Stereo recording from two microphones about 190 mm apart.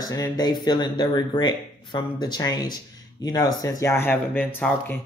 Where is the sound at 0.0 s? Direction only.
20° left (ahead or behind).